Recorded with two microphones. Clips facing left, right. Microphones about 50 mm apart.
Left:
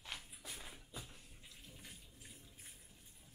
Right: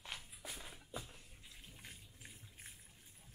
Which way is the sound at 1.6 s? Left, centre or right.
Right.